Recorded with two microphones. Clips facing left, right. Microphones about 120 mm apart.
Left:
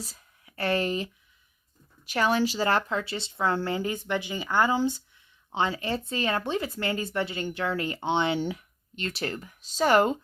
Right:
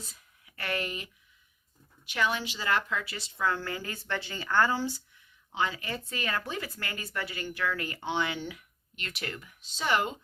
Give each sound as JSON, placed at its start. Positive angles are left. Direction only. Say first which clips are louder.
{"t": 0.0, "sound": "speech", "louder": "left 7 dB", "side_deg": 35}
{"t": 5.5, "sound": "speech", "louder": "left 5 dB", "side_deg": 30}